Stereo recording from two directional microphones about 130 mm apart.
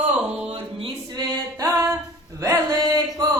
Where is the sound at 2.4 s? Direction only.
25° right (ahead or behind).